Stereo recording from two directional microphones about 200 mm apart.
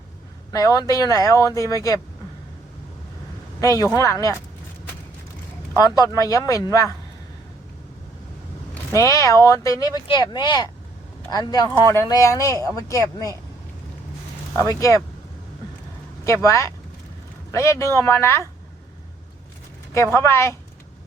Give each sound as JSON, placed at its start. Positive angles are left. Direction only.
{"t": 0.5, "sound": "speech", "side_deg": 15}
{"t": 3.6, "sound": "speech", "side_deg": 15}
{"t": 5.8, "sound": "speech", "side_deg": 20}
{"t": 9.0, "sound": "speech", "side_deg": 15}
{"t": 14.5, "sound": "speech", "side_deg": 15}
{"t": 16.2, "sound": "speech", "side_deg": 15}
{"t": 19.9, "sound": "speech", "side_deg": 15}